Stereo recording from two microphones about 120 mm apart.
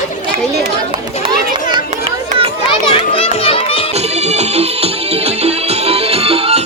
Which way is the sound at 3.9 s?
65° right (ahead or behind).